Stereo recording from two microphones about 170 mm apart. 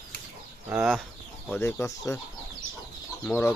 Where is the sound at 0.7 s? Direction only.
5° right (ahead or behind).